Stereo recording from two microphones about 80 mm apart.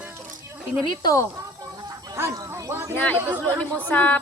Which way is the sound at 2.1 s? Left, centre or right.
Right.